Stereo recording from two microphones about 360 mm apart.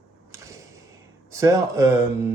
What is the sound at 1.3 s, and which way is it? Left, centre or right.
Speech, centre.